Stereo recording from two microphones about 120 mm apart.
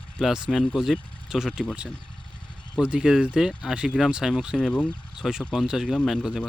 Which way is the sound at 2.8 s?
10° right (ahead or behind).